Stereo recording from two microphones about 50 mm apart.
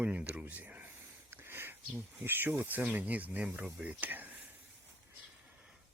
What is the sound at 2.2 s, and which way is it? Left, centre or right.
Speech, right.